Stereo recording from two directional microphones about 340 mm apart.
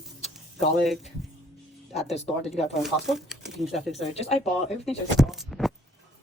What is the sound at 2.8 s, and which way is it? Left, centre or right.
Speech, centre.